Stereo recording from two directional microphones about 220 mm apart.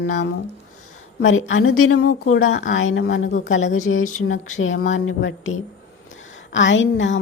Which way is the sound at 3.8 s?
75° left (ahead or behind).